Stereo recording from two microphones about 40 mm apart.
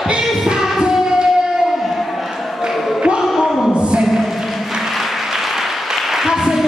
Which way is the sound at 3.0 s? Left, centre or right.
Centre.